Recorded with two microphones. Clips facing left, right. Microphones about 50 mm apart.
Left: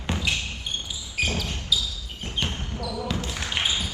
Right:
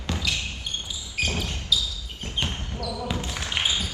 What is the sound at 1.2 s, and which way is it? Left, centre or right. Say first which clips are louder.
Basketball bounce: left 1 dB; centre.